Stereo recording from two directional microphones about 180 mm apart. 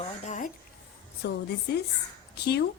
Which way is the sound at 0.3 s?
45° left (ahead or behind).